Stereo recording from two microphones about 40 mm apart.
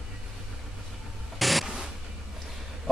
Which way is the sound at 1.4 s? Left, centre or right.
Centre.